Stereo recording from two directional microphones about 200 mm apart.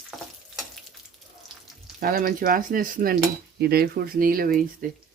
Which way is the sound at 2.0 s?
45° right (ahead or behind).